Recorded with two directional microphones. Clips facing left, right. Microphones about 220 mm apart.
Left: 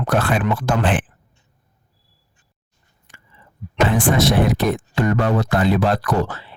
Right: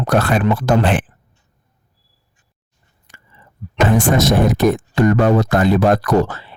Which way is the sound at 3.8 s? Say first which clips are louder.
Right 3 dB; 45° right (ahead or behind).